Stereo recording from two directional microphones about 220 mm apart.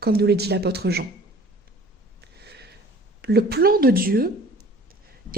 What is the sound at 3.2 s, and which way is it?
A woman's voice, 45° right (ahead or behind).